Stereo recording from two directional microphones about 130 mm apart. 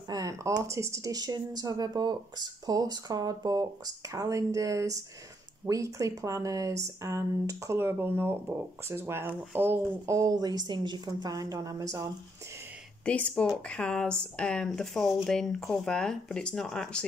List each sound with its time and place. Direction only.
0.1 s a sound: 25° right (ahead or behind)
0.7 s speech: 20° right (ahead or behind)
13.0 s speech: 10° left (ahead or behind)